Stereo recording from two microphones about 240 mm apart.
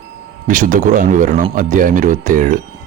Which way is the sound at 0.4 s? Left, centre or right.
Right.